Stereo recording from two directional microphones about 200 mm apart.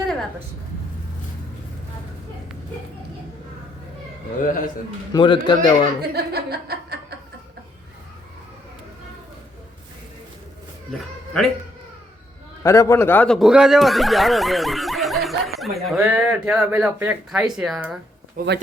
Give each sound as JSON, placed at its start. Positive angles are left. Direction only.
{"t": 4.4, "sound": "a man's voice", "side_deg": 40}
{"t": 5.1, "sound": "a man's voice", "side_deg": 25}
{"t": 6.0, "sound": "speech", "side_deg": -55}
{"t": 10.9, "sound": "a man's voice", "side_deg": 0}
{"t": 12.6, "sound": "speech", "side_deg": 15}
{"t": 18.4, "sound": "speech", "side_deg": -45}